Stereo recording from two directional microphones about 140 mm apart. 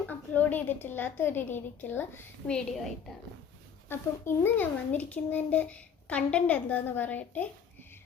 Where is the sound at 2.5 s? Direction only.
5° left (ahead or behind).